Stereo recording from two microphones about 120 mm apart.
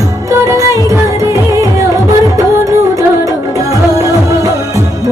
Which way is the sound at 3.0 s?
30° right (ahead or behind).